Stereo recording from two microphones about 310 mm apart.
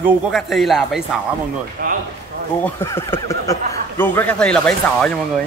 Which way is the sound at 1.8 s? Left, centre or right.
Right.